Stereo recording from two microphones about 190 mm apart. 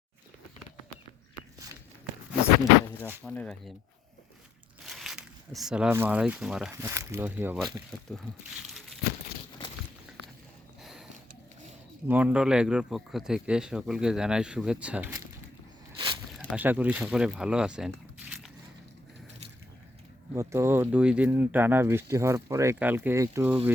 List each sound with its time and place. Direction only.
3.2 s speech: 5° left (ahead or behind)
4.9 s speech: centre (ahead or behind)
6.7 s speech: 15° right (ahead or behind); by 9.0 s centre (ahead or behind)
12.0 s speech: 10° right (ahead or behind)
16.0 s zipper: 25° right (ahead or behind)
16.4 s speech: 10° right (ahead or behind)
20.3 s speech: 15° right (ahead or behind)